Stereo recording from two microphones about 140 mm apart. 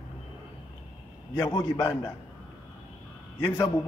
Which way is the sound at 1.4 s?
25° left (ahead or behind).